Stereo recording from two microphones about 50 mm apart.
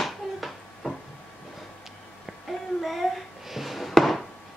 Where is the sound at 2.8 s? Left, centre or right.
Centre.